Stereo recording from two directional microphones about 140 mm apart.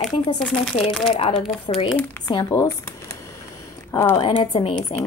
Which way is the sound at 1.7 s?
40° left (ahead or behind).